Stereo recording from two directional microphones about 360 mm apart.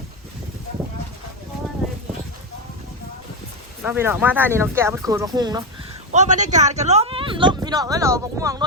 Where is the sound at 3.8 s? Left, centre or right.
Centre.